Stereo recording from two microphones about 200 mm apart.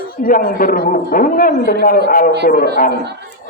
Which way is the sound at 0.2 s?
45° left (ahead or behind).